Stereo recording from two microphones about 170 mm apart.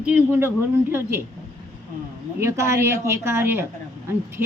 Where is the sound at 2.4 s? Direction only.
15° right (ahead or behind).